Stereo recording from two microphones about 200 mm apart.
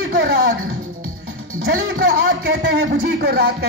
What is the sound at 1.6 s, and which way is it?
A man's voice, 50° right (ahead or behind).